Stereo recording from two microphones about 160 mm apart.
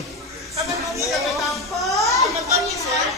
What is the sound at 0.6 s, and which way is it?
Speech, 20° right (ahead or behind).